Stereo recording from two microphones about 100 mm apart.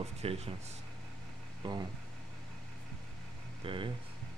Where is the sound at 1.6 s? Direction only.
45° right (ahead or behind).